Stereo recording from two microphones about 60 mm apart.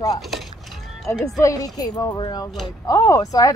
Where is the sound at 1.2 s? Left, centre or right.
Left.